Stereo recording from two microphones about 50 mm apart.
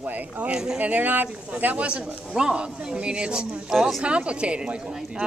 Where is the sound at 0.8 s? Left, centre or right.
Right; by 3.7 s centre.